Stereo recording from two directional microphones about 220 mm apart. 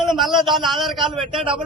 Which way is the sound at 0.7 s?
Centre (ahead or behind).